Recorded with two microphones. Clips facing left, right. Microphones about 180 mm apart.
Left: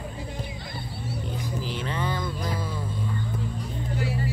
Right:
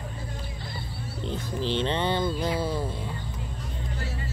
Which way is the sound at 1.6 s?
30° right (ahead or behind).